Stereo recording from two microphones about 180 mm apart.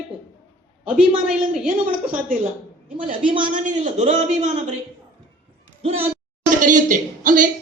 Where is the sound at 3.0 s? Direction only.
50° right (ahead or behind).